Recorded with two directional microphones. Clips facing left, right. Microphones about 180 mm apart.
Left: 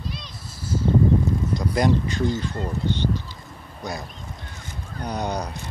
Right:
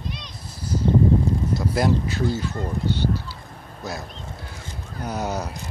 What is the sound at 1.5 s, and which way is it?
Speech, 5° right (ahead or behind).